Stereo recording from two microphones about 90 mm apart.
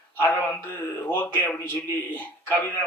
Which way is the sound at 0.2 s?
20° left (ahead or behind).